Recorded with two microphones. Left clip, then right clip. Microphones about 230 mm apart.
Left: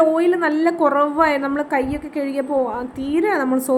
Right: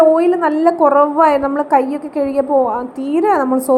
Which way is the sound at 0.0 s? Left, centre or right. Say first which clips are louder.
Right 5 dB; centre.